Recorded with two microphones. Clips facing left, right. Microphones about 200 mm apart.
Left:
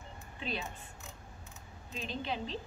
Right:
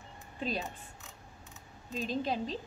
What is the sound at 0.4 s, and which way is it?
Speech, 40° right (ahead or behind).